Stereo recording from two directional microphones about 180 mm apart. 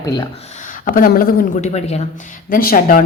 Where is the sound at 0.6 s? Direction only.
50° left (ahead or behind).